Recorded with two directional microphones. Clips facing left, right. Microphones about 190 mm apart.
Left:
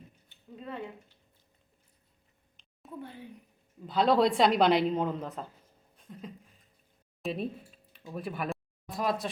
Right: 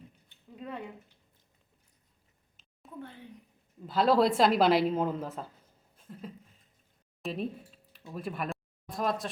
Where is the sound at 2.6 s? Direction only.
5° right (ahead or behind).